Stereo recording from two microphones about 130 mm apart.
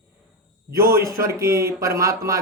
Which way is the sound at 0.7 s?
25° right (ahead or behind).